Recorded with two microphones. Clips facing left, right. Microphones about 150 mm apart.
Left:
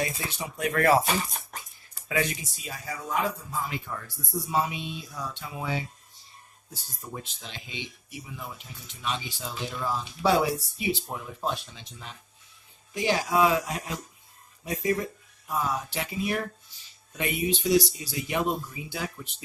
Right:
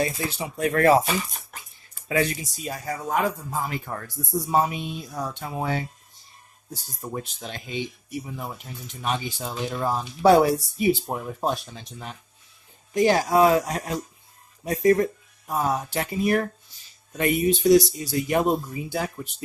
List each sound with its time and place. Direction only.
0.0 s speech: 30° right (ahead or behind)
1.0 s speech: 40° left (ahead or behind)
2.0 s speech: 35° right (ahead or behind)
7.1 s speech: 50° right (ahead or behind)